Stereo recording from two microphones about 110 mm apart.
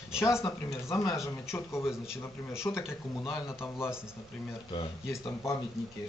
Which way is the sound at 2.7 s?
20° left (ahead or behind).